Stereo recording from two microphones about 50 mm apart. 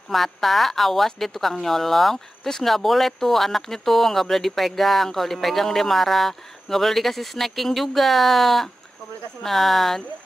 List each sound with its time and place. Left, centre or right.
0.1 s a woman's voice: centre